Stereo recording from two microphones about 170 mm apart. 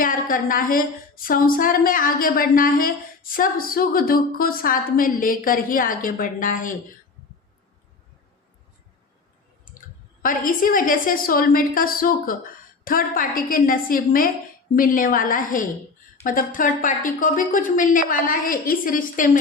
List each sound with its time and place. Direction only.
0.0 s a woman's voice: 55° left (ahead or behind)
10.2 s a woman's voice: 55° left (ahead or behind)